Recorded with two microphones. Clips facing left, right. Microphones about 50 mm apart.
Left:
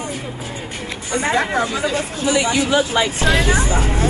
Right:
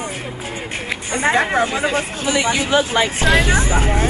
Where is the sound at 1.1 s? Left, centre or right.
Right.